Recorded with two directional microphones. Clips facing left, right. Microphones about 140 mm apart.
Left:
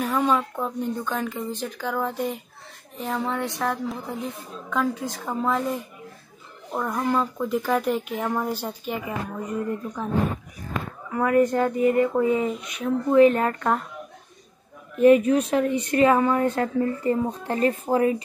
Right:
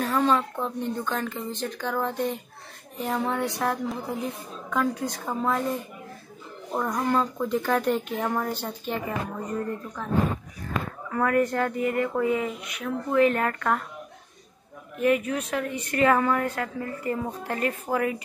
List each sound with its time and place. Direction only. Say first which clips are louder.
0.0 s a woman's voice: even; 10° left (ahead or behind)
6.9 s a woman's voice: left 1 dB; 5° left (ahead or behind)
11.1 s speech: left 4 dB; 20° left (ahead or behind)
15.0 s speech: left 8 dB; 25° left (ahead or behind)